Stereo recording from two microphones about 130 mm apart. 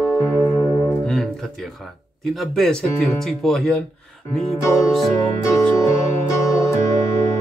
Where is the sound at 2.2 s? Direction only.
Centre (ahead or behind).